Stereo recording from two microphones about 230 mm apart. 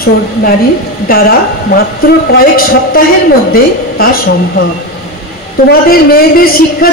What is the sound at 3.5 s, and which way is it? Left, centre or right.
Speech, left.